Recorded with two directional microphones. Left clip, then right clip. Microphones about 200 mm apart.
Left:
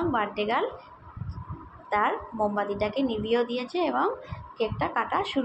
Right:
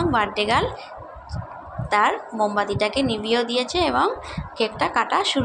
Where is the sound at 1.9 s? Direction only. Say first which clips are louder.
Right 6 dB; 25° right (ahead or behind).